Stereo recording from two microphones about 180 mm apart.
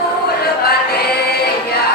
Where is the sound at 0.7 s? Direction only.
60° left (ahead or behind).